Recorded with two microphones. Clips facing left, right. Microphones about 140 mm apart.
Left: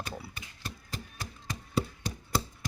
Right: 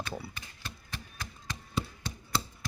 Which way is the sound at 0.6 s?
35° left (ahead or behind).